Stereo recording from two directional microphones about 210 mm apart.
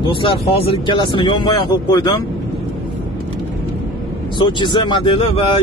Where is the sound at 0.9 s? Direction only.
25° left (ahead or behind).